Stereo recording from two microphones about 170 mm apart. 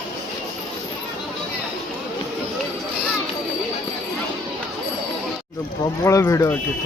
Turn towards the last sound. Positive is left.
turn(degrees=15)  # may be behind; listen again after turning